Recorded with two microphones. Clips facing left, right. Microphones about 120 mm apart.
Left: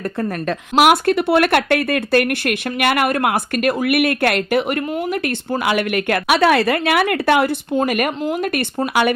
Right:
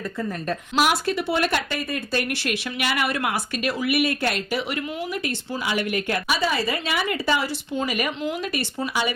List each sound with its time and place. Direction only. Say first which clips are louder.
0.2 s speech: left 5 dB; 60° left (ahead or behind)